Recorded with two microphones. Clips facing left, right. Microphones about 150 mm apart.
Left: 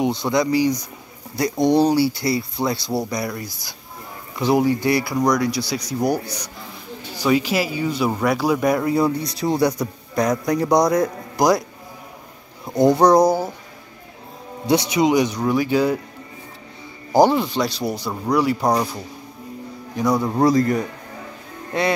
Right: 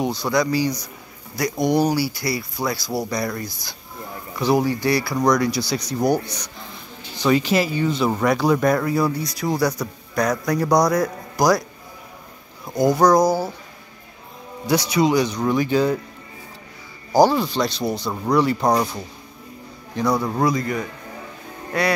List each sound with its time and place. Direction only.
0.0 s a man's voice: 20° left (ahead or behind)
1.8 s a man's voice: 25° left (ahead or behind)
3.1 s a man's voice: 10° left (ahead or behind)
5.3 s speech: centre (ahead or behind)
8.8 s a man's voice: 25° left (ahead or behind)
12.7 s a man's voice: 30° left (ahead or behind)
14.7 s speech: 20° left (ahead or behind)
17.1 s speech: 20° left (ahead or behind)
20.0 s speech: 15° left (ahead or behind)
20.4 s speech: 40° left (ahead or behind)
21.7 s a man's voice: 25° left (ahead or behind)